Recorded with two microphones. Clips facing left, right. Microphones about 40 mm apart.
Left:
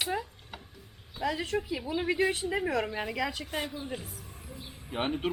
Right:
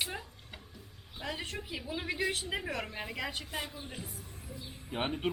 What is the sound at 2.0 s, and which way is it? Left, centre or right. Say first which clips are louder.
Speech: left 6 dB; left.